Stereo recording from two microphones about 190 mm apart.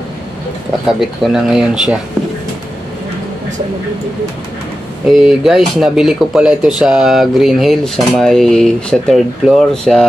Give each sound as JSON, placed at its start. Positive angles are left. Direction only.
{"t": 0.8, "sound": "speech", "side_deg": -5}
{"t": 5.2, "sound": "speech", "side_deg": 0}